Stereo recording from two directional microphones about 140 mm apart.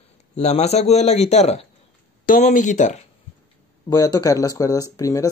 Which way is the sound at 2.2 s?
65° left (ahead or behind).